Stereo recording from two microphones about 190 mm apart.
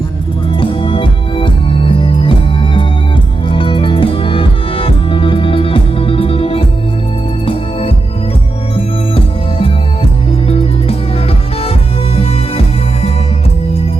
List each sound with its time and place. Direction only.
0.5 s music: 30° left (ahead or behind)